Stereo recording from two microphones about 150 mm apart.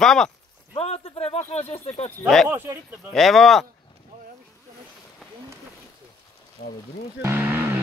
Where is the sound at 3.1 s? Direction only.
Centre (ahead or behind).